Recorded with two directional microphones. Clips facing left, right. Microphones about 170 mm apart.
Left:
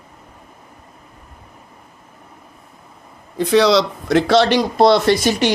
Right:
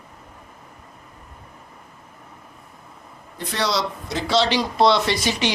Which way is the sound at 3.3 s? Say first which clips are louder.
Left 11 dB; 90° left.